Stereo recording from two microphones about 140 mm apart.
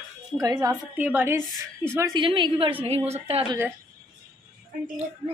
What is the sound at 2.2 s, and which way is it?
A woman's voice, 35° right (ahead or behind).